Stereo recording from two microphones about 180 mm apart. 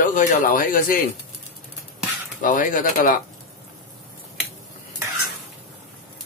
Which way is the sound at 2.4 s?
50° left (ahead or behind).